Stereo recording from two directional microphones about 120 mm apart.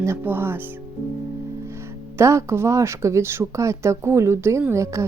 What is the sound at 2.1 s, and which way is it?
Speech, 25° right (ahead or behind).